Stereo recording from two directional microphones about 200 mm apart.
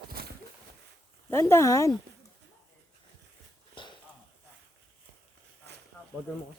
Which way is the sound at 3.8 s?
25° left (ahead or behind).